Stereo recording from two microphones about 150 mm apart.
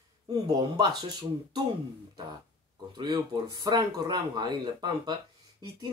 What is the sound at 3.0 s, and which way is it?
Speech, 30° right (ahead or behind).